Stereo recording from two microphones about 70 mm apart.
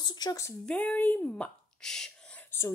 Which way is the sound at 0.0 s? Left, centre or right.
Left.